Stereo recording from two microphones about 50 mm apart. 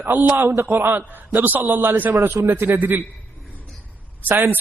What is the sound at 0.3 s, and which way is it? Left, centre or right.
A man's voice, right.